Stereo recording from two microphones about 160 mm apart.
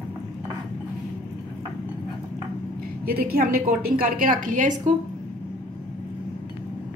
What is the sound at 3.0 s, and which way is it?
A woman's voice, 70° right (ahead or behind).